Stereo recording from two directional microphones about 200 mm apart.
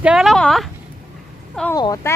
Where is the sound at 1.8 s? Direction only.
20° left (ahead or behind).